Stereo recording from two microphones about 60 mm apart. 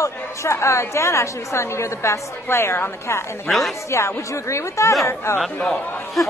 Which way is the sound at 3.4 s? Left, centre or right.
Centre.